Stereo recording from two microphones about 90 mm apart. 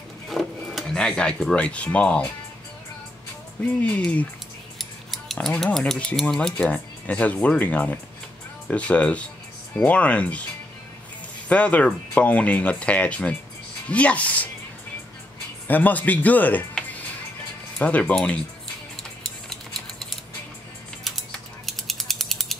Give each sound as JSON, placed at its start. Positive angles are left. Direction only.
{"t": 0.3, "sound": "speech", "side_deg": 0}
{"t": 3.6, "sound": "speech", "side_deg": 15}
{"t": 11.4, "sound": "speech", "side_deg": 15}
{"t": 15.6, "sound": "speech", "side_deg": 20}
{"t": 17.7, "sound": "speech", "side_deg": 15}
{"t": 21.6, "sound": "ratchet", "side_deg": 5}